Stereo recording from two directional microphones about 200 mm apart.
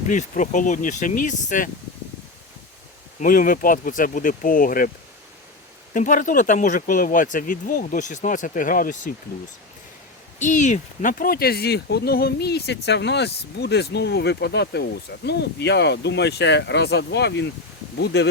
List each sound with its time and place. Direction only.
0.1 s speech: 40° left (ahead or behind)
3.2 s speech: 45° left (ahead or behind)
5.9 s speech: 40° left (ahead or behind)
10.4 s speech: 40° left (ahead or behind); by 18.3 s 60° left (ahead or behind)